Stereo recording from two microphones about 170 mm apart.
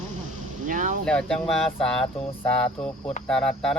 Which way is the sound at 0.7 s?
50° right (ahead or behind).